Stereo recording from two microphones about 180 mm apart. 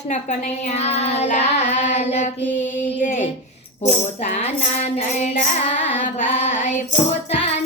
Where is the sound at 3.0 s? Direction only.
45° left (ahead or behind).